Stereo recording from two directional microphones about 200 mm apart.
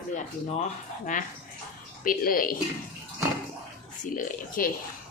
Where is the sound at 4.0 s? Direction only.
40° left (ahead or behind).